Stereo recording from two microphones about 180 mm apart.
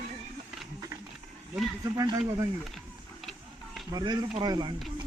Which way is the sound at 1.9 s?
20° right (ahead or behind).